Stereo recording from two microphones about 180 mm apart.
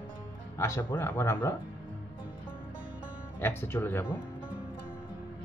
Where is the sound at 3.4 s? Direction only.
10° left (ahead or behind).